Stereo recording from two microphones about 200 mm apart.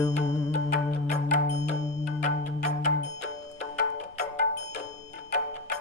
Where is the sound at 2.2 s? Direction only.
35° left (ahead or behind).